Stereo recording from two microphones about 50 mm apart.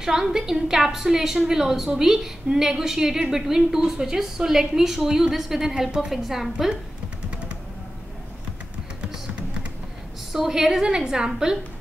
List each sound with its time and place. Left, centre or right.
0.0 s a woman's voice: centre
10.3 s a woman's voice: centre